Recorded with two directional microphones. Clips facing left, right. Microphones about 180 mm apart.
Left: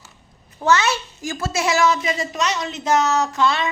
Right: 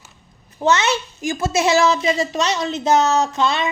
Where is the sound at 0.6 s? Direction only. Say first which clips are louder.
Right 1 dB; 20° right (ahead or behind).